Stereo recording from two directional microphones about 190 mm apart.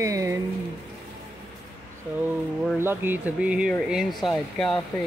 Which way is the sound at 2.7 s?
10° right (ahead or behind).